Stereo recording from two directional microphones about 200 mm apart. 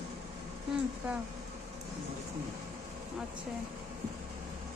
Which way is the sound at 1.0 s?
10° right (ahead or behind).